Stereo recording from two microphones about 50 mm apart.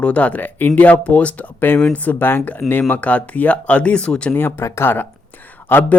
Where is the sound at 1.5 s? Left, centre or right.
Left.